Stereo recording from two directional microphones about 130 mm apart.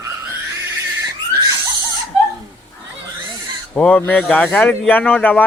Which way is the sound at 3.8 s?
10° left (ahead or behind).